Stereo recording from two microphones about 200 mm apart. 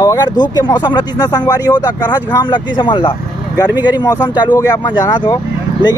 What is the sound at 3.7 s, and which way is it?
Speech, 10° right (ahead or behind).